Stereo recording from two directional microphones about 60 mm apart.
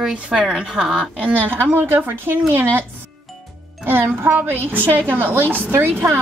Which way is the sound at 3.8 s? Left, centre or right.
Right.